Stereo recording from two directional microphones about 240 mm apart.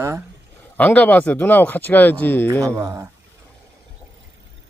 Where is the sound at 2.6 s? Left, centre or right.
Centre.